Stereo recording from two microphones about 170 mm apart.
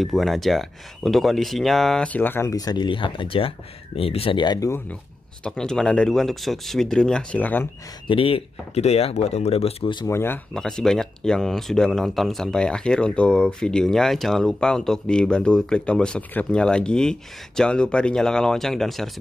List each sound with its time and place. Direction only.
0.0 s speech: centre (ahead or behind); by 4.8 s 20° left (ahead or behind)
5.4 s speech: 5° left (ahead or behind)
8.1 s speech: 35° left (ahead or behind)
10.0 s speech: 15° left (ahead or behind)
10.5 s speech: 5° left (ahead or behind)